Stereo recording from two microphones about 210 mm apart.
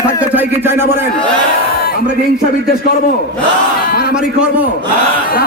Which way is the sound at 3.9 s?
50° left (ahead or behind).